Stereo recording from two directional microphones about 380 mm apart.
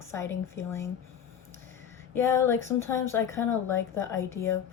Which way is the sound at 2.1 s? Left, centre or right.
Centre.